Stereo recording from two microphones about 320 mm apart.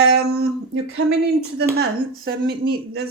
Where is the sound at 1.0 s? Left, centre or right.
Right.